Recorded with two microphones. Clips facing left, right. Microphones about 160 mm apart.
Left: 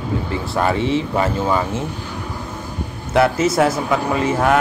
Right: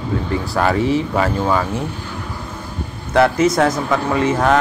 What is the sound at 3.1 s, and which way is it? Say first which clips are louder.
Speech: right 2 dB; 25° left (ahead or behind).